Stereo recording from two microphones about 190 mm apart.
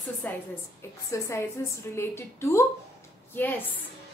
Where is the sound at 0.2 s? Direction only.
10° left (ahead or behind).